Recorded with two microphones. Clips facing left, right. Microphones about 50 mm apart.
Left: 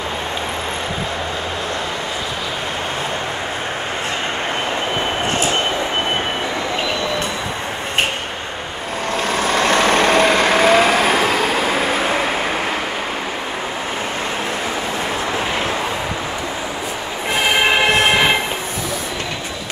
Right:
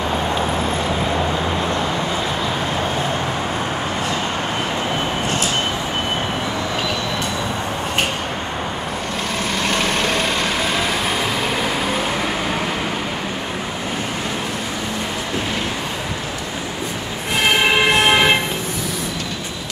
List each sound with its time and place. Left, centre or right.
9.4 s vehicle: left